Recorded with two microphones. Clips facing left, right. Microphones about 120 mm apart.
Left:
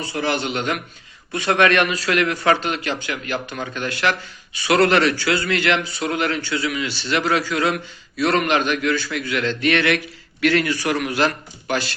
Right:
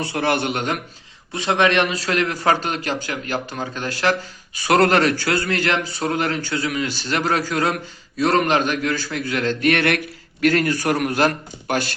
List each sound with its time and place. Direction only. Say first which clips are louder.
0.0 s a man's voice: right 2 dB; 60° right (ahead or behind); by 0.8 s 45° right (ahead or behind)
1.3 s a man's voice: left 1 dB; 25° right (ahead or behind); by 11.9 s 50° right (ahead or behind)